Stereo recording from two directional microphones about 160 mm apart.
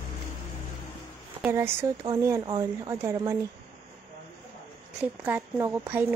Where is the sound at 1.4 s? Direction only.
15° right (ahead or behind).